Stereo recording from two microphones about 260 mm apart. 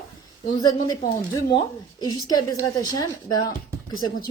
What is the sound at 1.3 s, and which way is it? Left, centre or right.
Speech, centre.